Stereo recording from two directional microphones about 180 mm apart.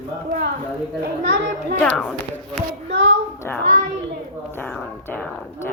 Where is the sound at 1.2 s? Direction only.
75° right (ahead or behind).